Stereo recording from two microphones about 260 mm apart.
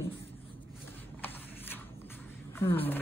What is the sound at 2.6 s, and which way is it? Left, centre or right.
Speech, centre.